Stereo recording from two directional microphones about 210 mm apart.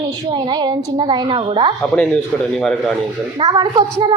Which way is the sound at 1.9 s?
5° left (ahead or behind).